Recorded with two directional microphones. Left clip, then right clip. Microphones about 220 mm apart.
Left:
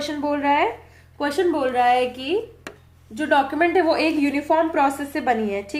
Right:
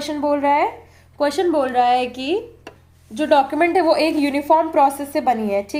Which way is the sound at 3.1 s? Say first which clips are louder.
Right 4 dB; 35° right (ahead or behind).